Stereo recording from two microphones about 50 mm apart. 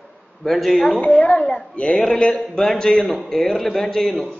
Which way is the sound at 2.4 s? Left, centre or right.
Centre.